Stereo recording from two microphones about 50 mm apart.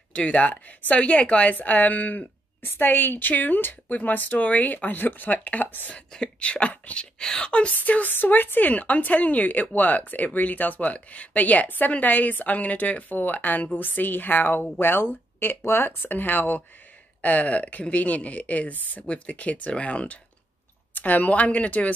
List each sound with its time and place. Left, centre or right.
0.1 s speech: left
5.9 s speech: left
7.2 s speech: centre
7.7 s speech: left